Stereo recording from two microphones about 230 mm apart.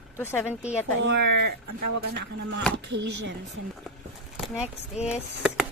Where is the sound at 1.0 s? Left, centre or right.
Right.